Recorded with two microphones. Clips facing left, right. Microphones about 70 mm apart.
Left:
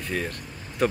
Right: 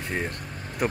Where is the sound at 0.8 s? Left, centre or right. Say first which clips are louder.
Left 3 dB; centre.